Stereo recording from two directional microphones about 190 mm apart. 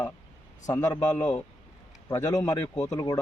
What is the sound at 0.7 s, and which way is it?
Speech, 20° left (ahead or behind).